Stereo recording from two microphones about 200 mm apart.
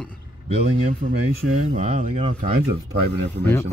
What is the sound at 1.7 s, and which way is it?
Speech, 40° right (ahead or behind).